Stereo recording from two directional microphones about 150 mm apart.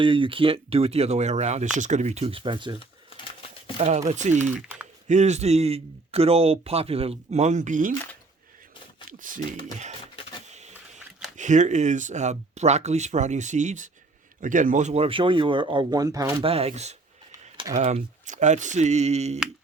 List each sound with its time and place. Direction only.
0.0 s a man's voice: 35° right (ahead or behind)
3.8 s a man's voice: 50° right (ahead or behind)
4.5 s typing: 10° right (ahead or behind)
5.0 s a man's voice: 50° right (ahead or behind)
9.0 s speech: 60° right (ahead or behind)
10.5 s printer: 50° right (ahead or behind)
11.3 s a man's voice: 55° right (ahead or behind); by 16.3 s 25° right (ahead or behind)
16.4 s a man's voice: 40° right (ahead or behind)